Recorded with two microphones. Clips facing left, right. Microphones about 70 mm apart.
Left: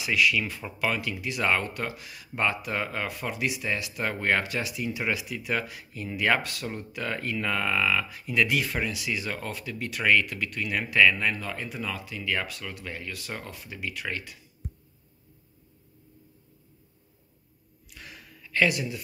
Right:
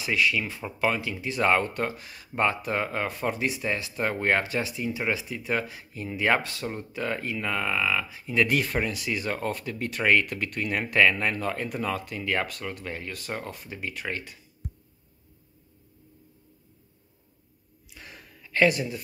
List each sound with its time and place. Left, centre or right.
0.0 s speech: right
0.4 s speech: centre
7.3 s speech: centre
8.2 s speech: right
8.5 s speech: right
17.9 s gasp: right
18.4 s speech: right